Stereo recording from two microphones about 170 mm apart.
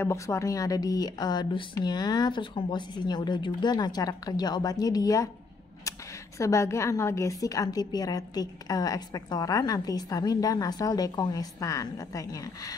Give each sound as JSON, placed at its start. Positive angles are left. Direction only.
{"t": 0.0, "sound": "a woman's voice", "side_deg": 15}